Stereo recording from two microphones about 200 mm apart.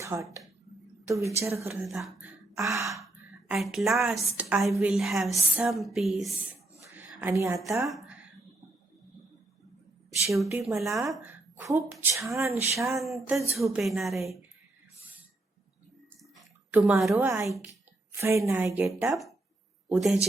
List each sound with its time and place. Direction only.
0.0 s a woman's voice: 15° right (ahead or behind)
1.9 s speech: centre (ahead or behind)
3.5 s a woman's voice: 5° right (ahead or behind)
7.2 s a woman's voice: 10° right (ahead or behind)
7.8 s speech: centre (ahead or behind)
10.3 s a woman's voice: centre (ahead or behind)
13.0 s a woman's voice: centre (ahead or behind)
16.4 s a sound: 5° right (ahead or behind)
17.4 s a woman's voice: centre (ahead or behind)
18.2 s a woman's voice: 15° right (ahead or behind)
19.0 s a woman's voice: centre (ahead or behind)